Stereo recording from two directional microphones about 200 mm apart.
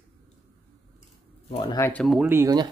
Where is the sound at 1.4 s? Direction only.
30° left (ahead or behind).